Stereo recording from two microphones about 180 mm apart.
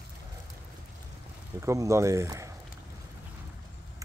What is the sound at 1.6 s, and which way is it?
Speech, 15° right (ahead or behind).